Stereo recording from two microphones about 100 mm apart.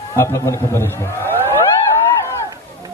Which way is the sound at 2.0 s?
25° left (ahead or behind).